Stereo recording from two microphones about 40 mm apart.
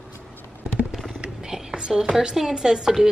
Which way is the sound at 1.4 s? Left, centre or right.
Centre.